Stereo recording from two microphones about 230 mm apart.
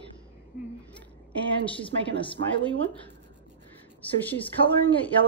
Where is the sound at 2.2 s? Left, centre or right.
Left.